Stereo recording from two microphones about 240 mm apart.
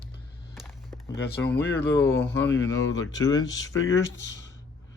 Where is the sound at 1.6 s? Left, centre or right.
Left.